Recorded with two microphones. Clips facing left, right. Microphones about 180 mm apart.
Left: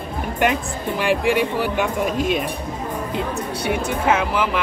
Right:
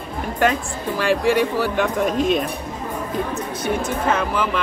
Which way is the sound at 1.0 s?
15° left (ahead or behind).